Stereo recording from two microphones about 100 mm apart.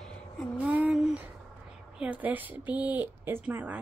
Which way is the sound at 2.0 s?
15° right (ahead or behind).